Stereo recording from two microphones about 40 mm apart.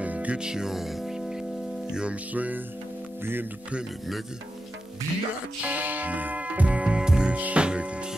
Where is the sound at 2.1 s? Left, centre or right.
Right.